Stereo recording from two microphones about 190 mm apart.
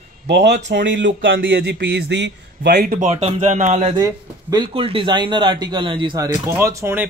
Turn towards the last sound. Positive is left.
turn(degrees=-15)  # may be behind; listen again after turning